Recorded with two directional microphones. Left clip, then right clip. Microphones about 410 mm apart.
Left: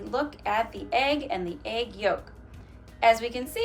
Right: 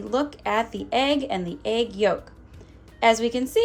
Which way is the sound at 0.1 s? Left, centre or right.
Centre.